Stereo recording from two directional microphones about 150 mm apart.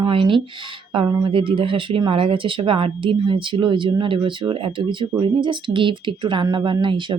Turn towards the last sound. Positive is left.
turn(degrees=-35)  # may be behind; listen again after turning